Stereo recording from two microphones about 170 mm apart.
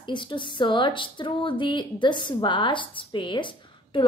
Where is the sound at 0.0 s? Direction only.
30° left (ahead or behind).